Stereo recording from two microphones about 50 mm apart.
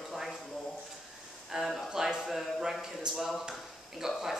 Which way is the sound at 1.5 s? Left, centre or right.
Centre.